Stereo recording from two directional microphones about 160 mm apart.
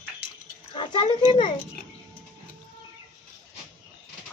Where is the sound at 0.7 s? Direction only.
30° left (ahead or behind).